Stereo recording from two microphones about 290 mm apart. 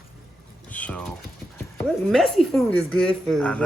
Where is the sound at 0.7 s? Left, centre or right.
Centre.